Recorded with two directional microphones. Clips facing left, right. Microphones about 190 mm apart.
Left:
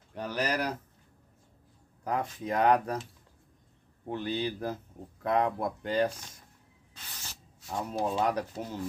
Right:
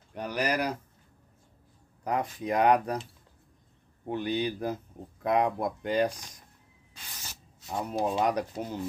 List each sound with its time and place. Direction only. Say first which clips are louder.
0.1 s speech: right 2 dB; 15° right (ahead or behind)
2.0 s speech: right 2 dB; 15° right (ahead or behind)
4.1 s speech: right 2 dB; 15° right (ahead or behind)
7.6 s speech: right 2 dB; 15° right (ahead or behind)